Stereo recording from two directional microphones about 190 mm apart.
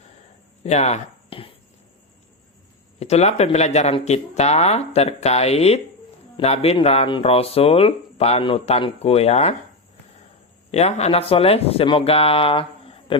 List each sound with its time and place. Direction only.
0.6 s speech: 35° left (ahead or behind)
3.0 s speech: 35° left (ahead or behind)
10.7 s speech: 35° left (ahead or behind)